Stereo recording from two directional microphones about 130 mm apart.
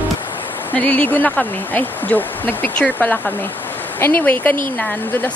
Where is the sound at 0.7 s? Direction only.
10° left (ahead or behind).